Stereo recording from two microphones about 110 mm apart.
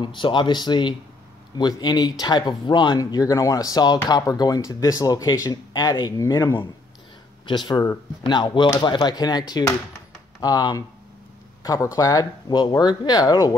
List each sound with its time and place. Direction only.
0.0 s speech: 45° left (ahead or behind)